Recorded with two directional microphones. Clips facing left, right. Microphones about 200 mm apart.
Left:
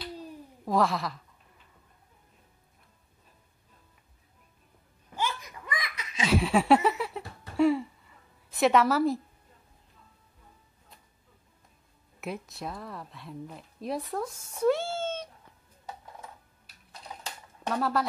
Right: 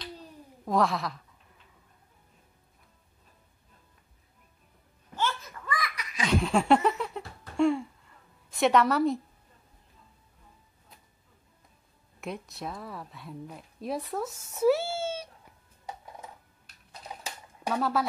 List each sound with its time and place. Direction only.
0.0 s a sound: 5° left (ahead or behind)
5.1 s laughter: 15° left (ahead or behind)
6.2 s laughter: 5° left (ahead or behind)
12.2 s speech: centre (ahead or behind)
14.5 s cat: 5° right (ahead or behind)
17.2 s a sound: 5° right (ahead or behind)